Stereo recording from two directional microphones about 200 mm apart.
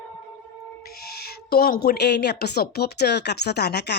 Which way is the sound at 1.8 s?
55° left (ahead or behind).